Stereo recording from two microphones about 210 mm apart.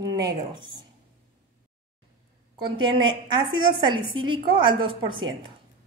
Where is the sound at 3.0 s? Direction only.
20° right (ahead or behind).